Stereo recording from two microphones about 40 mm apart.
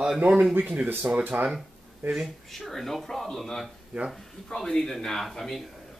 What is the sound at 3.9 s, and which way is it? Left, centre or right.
Speech, right.